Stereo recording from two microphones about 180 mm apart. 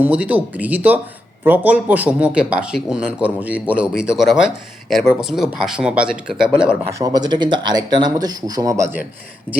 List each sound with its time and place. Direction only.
0.0 s speech: 10° right (ahead or behind)
6.9 s speech: 20° right (ahead or behind)
9.5 s speech: 5° left (ahead or behind)